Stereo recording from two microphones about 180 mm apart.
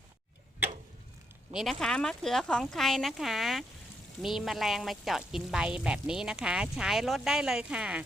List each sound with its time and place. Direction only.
1.5 s speech: centre (ahead or behind)